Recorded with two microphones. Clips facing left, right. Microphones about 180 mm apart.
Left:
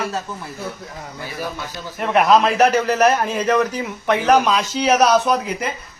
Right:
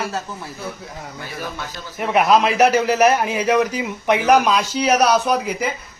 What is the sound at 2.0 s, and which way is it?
A man's voice, centre (ahead or behind).